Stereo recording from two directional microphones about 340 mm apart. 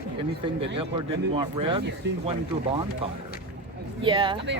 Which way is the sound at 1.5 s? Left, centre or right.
Centre.